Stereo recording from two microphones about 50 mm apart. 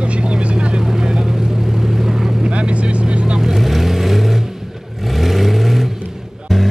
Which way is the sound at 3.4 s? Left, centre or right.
Centre.